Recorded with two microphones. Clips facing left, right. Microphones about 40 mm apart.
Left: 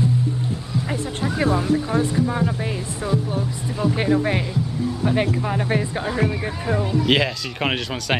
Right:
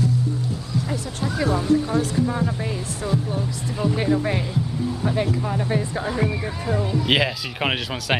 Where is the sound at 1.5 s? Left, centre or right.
Centre.